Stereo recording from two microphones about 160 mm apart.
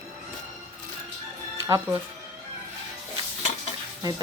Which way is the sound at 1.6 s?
20° right (ahead or behind).